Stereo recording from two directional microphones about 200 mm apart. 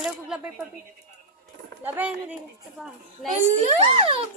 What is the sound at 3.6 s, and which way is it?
Speech, 30° right (ahead or behind).